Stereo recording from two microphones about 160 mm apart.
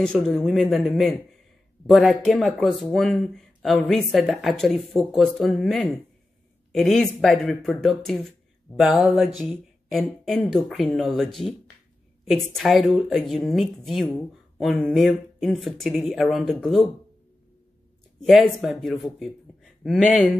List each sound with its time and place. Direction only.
0.0 s speech: 5° left (ahead or behind)
18.2 s speech: centre (ahead or behind)